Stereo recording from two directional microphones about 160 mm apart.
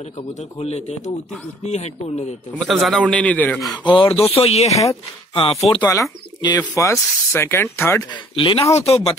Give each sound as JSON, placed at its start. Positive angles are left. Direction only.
{"t": 0.3, "sound": "a man's voice", "side_deg": 40}
{"t": 2.6, "sound": "speech", "side_deg": 0}
{"t": 3.8, "sound": "speech", "side_deg": 35}
{"t": 5.8, "sound": "speech", "side_deg": 20}
{"t": 8.1, "sound": "speech", "side_deg": 30}